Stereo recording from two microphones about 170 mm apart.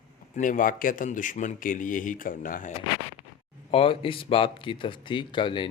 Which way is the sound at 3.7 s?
35° left (ahead or behind).